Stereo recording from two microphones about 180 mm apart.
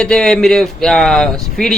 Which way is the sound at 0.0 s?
5° left (ahead or behind).